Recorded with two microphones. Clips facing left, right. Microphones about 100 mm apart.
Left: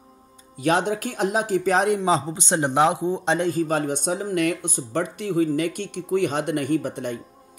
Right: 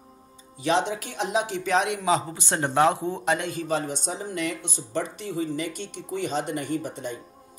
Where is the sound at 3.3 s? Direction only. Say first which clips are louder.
Left 5 dB; 40° left (ahead or behind); by 7.1 s 55° left (ahead or behind).